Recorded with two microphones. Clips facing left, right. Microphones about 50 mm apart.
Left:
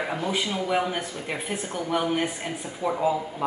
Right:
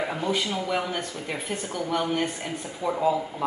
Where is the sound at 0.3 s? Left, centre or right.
Centre.